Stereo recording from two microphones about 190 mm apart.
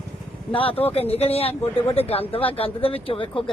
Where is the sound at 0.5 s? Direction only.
30° left (ahead or behind).